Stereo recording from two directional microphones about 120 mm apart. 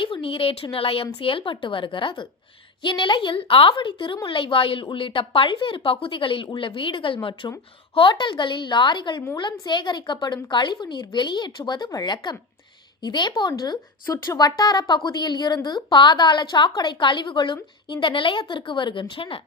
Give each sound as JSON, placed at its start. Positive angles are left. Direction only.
{"t": 0.0, "sound": "a woman's voice", "side_deg": 45}